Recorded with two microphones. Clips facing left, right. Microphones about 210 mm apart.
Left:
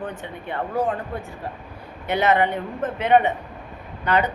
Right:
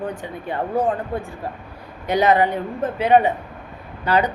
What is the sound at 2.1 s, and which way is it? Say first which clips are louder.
Speech: right 3 dB; 35° right (ahead or behind).